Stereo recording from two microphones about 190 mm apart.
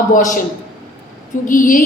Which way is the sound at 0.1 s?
40° left (ahead or behind).